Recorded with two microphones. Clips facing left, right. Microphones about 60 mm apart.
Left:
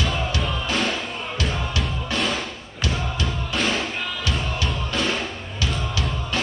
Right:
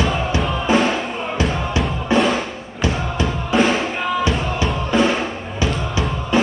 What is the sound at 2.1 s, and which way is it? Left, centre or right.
Drum, right.